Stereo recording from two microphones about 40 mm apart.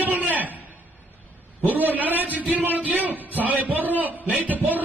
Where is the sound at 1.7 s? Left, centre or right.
Right.